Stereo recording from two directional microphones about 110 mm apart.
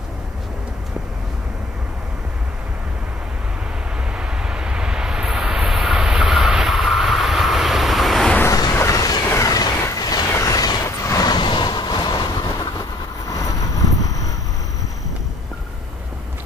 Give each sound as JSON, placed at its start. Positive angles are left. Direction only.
{"t": 4.2, "sound": "vehicle", "side_deg": -10}
{"t": 8.5, "sound": "a sound", "side_deg": 30}
{"t": 13.3, "sound": "vehicle", "side_deg": 30}